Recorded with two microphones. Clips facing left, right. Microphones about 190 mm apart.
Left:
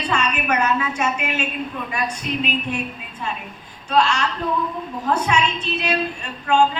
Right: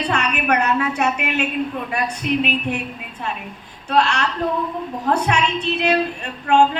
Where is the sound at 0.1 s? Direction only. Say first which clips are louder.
Even; 60° right (ahead or behind).